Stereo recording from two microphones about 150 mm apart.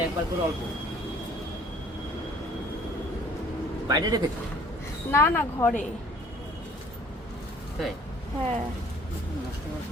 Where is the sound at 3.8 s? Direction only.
25° right (ahead or behind).